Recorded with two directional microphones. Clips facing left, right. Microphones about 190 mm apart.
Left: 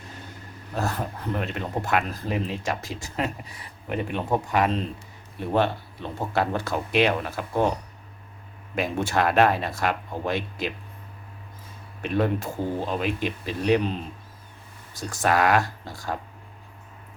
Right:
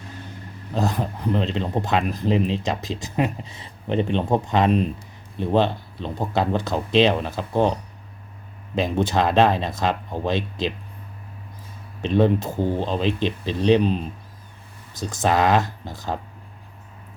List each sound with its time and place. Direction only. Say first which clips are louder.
0.7 s speech: right 4 dB; 15° right (ahead or behind)
12.0 s speech: right 5 dB; 25° right (ahead or behind)
14.9 s speech: right 2 dB; 20° right (ahead or behind)